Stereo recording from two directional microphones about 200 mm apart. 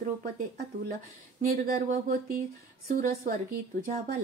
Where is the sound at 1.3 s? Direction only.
50° right (ahead or behind).